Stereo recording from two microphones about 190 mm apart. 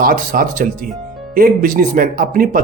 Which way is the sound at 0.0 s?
45° right (ahead or behind).